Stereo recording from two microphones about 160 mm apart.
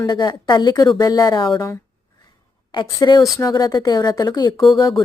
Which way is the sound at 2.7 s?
30° left (ahead or behind).